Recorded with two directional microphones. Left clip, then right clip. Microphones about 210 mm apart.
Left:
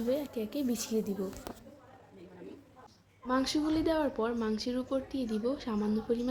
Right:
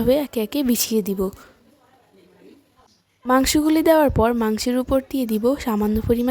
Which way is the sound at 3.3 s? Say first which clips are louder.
Right 13 dB; 50° right (ahead or behind).